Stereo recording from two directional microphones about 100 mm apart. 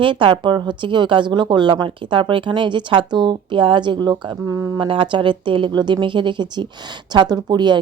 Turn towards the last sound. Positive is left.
turn(degrees=-45)  # may be behind; listen again after turning